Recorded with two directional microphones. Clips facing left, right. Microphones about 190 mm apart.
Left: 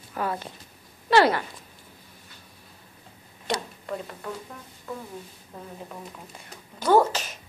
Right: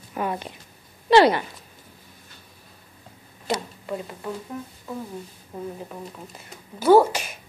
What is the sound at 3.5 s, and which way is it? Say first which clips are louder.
Speech: right 2 dB; 10° right (ahead or behind).